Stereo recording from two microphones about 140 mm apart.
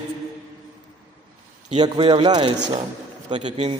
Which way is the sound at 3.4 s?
50° right (ahead or behind).